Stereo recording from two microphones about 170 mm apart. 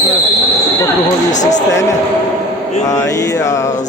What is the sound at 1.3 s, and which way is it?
Speech, 45° left (ahead or behind).